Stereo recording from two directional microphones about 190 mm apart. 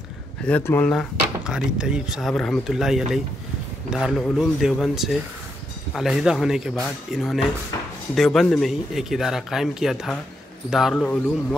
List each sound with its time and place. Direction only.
0.5 s speech: 10° left (ahead or behind)
1.4 s speech: 5° right (ahead or behind)
7.7 s drawer open or close: 20° left (ahead or behind)
8.1 s speech: centre (ahead or behind)